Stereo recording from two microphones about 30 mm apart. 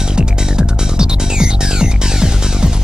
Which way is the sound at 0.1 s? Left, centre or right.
Right.